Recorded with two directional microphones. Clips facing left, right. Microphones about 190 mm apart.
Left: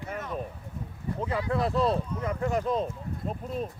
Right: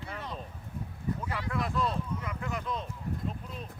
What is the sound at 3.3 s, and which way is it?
Speech, 45° left (ahead or behind).